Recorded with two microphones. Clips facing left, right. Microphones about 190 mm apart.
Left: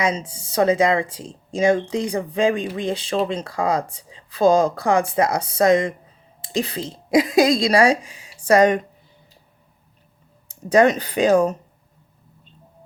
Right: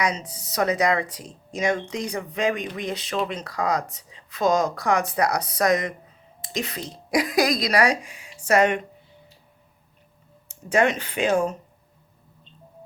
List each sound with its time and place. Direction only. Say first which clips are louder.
0.0 s speech: left 4 dB; 25° left (ahead or behind)
10.5 s speech: left 6 dB; 35° left (ahead or behind)